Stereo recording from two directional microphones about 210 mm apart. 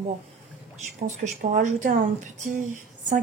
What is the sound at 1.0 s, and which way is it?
Speech, 35° right (ahead or behind).